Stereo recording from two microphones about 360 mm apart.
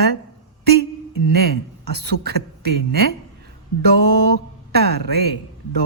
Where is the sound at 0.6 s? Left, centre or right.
Right.